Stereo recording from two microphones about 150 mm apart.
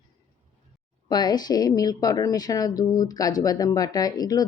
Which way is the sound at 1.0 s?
25° left (ahead or behind).